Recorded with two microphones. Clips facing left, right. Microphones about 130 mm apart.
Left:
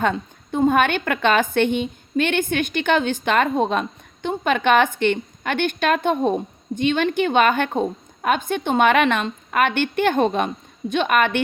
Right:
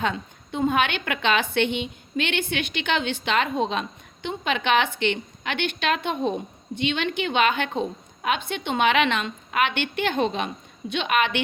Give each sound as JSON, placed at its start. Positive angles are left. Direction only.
{"t": 0.0, "sound": "a woman's voice", "side_deg": 45}